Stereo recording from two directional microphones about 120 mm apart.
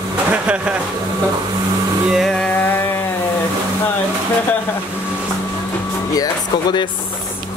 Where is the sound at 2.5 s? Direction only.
15° left (ahead or behind).